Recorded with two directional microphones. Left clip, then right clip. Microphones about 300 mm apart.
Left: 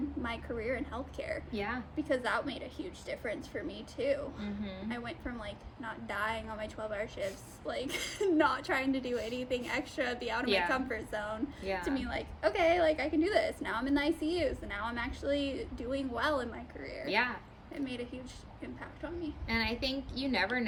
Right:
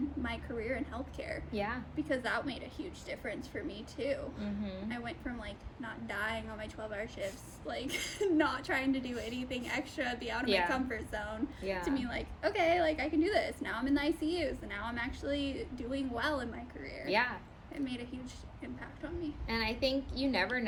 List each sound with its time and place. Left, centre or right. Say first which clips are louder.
0.2 s a woman's voice: left 1 dB; centre
1.5 s a woman's voice: right 2 dB; centre
2.0 s a woman's voice: left 2 dB; centre
10.4 s a woman's voice: even; centre
10.7 s a woman's voice: left 2 dB; centre
11.6 s a woman's voice: even; centre
11.9 s a woman's voice: left 1 dB; centre
17.1 s a woman's voice: even; centre
17.8 s a woman's voice: left 2 dB; centre
19.5 s a woman's voice: even; centre